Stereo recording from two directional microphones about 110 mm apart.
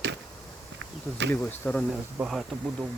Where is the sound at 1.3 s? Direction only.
20° left (ahead or behind).